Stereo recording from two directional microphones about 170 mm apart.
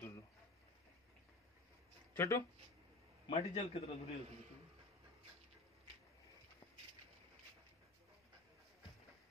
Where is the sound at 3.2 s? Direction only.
40° left (ahead or behind).